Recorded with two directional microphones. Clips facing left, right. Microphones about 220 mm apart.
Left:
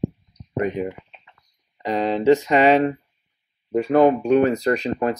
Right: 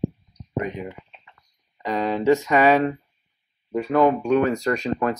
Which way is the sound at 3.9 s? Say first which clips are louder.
Left 3 dB; 35° left (ahead or behind).